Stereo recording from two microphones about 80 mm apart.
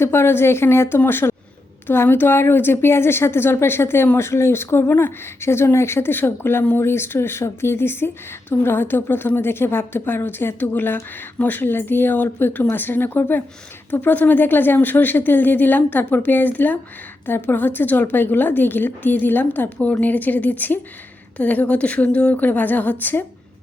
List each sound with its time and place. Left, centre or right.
0.0 s a woman's voice: left